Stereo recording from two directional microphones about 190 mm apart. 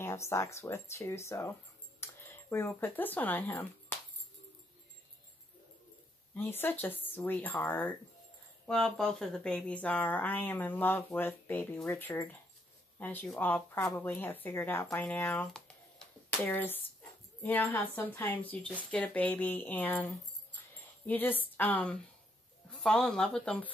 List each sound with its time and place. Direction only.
0.0 s speech: 15° left (ahead or behind)
6.3 s speech: 10° left (ahead or behind)
21.1 s speech: 10° left (ahead or behind)